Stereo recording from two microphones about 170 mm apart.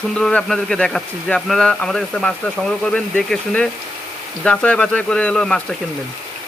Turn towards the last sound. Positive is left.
turn(degrees=5)  # may be behind; listen again after turning